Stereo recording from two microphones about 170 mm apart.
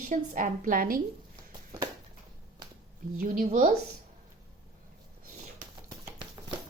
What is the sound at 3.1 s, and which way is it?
Speech, 50° right (ahead or behind).